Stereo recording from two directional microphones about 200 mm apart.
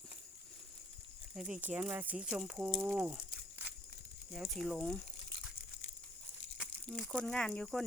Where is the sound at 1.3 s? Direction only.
5° right (ahead or behind).